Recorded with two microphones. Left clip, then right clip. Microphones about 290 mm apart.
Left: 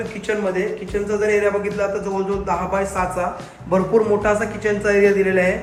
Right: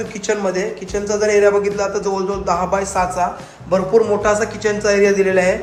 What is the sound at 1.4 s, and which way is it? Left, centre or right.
A man's voice, centre.